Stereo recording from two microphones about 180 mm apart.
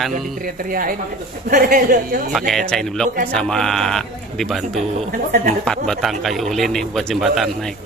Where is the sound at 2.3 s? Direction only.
Centre (ahead or behind).